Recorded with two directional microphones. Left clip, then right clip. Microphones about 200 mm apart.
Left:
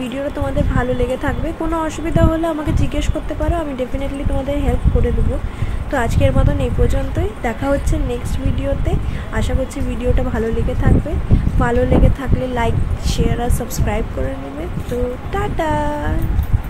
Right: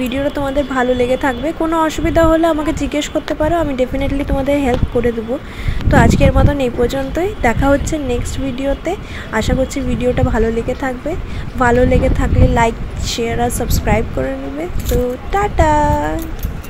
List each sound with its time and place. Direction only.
0.7 s a woman's voice: 25° right (ahead or behind)
15.3 s a woman's voice: 25° right (ahead or behind)